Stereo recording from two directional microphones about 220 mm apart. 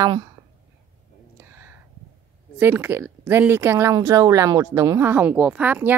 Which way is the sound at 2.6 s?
10° right (ahead or behind).